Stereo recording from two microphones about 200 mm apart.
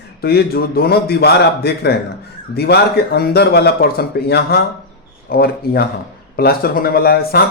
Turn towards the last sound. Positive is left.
turn(degrees=50)  # may be behind; listen again after turning